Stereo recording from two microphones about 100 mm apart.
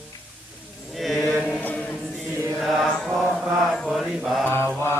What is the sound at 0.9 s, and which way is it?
Chant, centre (ahead or behind).